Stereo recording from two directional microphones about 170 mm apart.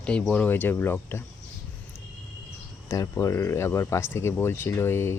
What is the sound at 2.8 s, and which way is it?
Speech, 20° left (ahead or behind).